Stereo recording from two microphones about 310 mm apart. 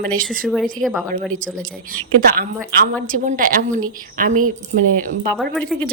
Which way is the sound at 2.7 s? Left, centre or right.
Right.